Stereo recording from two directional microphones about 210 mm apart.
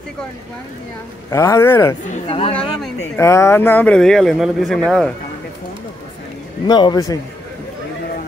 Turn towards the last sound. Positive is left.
turn(degrees=20)  # may be behind; listen again after turning